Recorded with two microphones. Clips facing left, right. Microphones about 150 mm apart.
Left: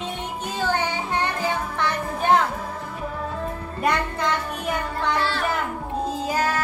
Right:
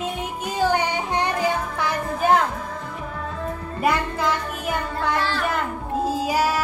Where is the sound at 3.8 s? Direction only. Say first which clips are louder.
Right 1 dB; 5° right (ahead or behind).